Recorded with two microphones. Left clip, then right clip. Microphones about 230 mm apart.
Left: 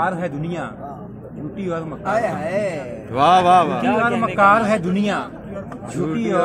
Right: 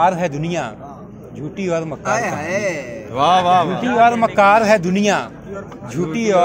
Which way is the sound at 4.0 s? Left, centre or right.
Right.